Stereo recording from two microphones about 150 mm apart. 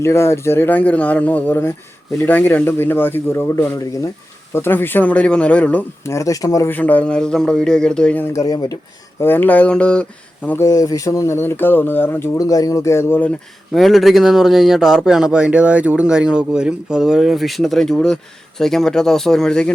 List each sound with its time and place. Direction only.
0.0 s speech: 20° left (ahead or behind)
10.7 s speech: 25° left (ahead or behind)
13.7 s speech: centre (ahead or behind)